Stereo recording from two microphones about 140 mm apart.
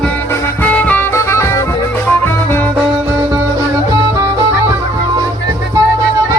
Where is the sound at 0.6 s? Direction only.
10° left (ahead or behind).